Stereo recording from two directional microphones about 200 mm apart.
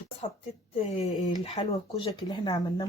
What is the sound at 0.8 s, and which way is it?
Speech, 30° left (ahead or behind).